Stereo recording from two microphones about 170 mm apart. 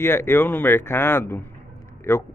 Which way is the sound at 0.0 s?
15° left (ahead or behind).